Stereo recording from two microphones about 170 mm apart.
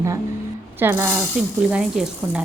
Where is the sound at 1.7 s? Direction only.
5° right (ahead or behind).